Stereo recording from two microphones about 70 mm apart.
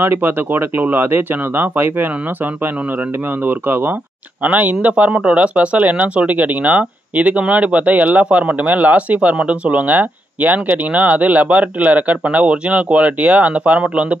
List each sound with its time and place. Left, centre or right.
0.0 s speech: right